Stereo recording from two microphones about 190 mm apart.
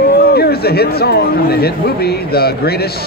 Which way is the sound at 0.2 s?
55° left (ahead or behind).